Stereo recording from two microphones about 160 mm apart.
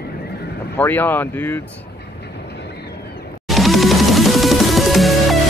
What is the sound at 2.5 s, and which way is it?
Train, 90° left.